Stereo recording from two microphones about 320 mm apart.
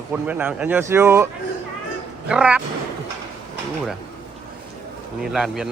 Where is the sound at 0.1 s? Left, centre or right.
Centre.